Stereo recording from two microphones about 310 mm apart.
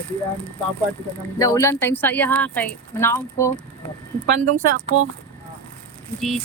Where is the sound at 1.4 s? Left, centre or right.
Centre.